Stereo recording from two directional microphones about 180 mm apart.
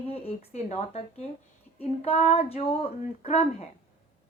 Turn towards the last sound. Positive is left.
turn(degrees=35)  # may be behind; listen again after turning